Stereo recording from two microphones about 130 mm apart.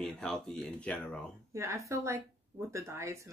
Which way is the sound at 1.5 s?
20° right (ahead or behind).